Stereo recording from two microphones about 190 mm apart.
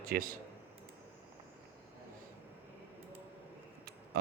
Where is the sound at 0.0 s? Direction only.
50° right (ahead or behind).